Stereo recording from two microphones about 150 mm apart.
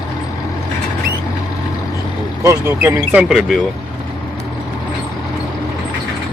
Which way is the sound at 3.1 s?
5° right (ahead or behind).